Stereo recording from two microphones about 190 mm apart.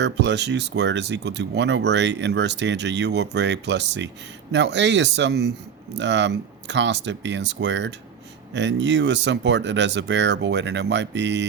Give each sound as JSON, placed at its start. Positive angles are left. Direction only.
{"t": 0.0, "sound": "speech", "side_deg": -65}